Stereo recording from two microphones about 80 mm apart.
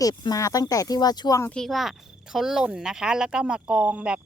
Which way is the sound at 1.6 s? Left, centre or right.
Centre.